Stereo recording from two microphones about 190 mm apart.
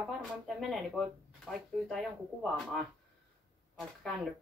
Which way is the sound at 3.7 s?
Centre (ahead or behind).